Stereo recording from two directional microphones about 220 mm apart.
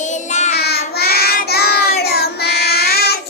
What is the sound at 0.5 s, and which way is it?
Child singing, 45° left (ahead or behind).